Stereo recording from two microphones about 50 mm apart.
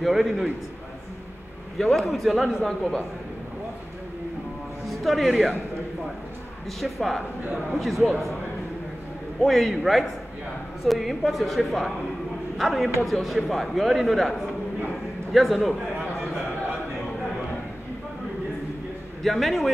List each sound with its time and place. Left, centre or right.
0.0 s speech: centre
1.8 s speech: centre
2.7 s a man's voice: centre
4.8 s speech: centre
6.8 s speech: centre
9.4 s speech: centre
15.3 s speech: centre
19.2 s speech: centre